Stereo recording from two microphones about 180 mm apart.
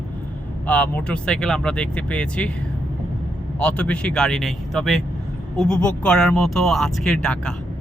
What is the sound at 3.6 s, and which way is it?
Speech, 5° left (ahead or behind).